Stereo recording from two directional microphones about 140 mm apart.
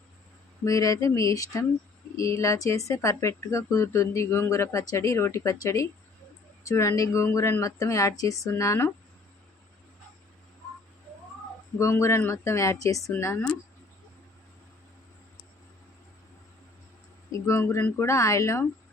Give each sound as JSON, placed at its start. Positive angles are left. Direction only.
{"t": 0.6, "sound": "speech", "side_deg": 25}
{"t": 11.8, "sound": "speech", "side_deg": 20}
{"t": 17.4, "sound": "speech", "side_deg": 20}